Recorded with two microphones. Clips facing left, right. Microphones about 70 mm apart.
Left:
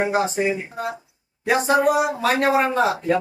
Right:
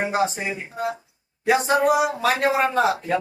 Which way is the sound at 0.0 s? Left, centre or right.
Centre.